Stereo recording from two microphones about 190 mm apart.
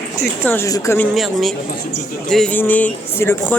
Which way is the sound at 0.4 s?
15° left (ahead or behind).